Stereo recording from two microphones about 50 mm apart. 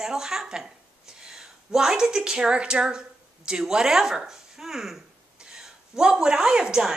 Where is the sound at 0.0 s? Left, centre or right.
Centre.